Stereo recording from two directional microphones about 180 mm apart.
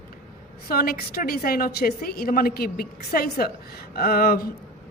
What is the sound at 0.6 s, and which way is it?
A woman's voice, 55° left (ahead or behind).